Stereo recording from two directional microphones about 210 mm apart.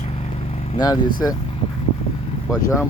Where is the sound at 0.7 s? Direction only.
20° left (ahead or behind).